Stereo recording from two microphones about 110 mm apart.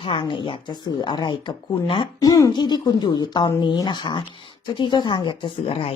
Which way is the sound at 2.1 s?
30° left (ahead or behind).